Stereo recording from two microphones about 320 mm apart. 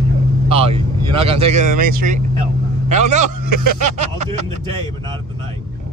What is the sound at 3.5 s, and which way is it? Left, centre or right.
Speech, right.